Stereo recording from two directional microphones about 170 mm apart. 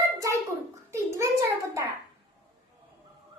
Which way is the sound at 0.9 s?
15° right (ahead or behind).